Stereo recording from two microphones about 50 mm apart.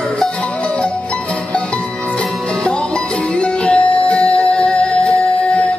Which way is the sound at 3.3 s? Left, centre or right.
Left.